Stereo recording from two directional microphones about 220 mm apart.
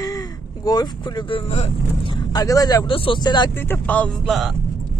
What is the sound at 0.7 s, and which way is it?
Speech, 20° left (ahead or behind).